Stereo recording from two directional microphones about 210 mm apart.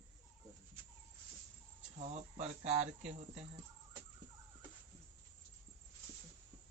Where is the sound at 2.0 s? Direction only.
30° right (ahead or behind).